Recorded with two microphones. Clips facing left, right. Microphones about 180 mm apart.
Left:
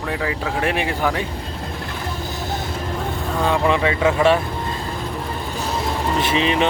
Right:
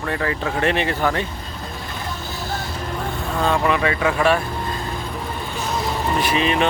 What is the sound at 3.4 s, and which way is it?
Speech, 15° left (ahead or behind).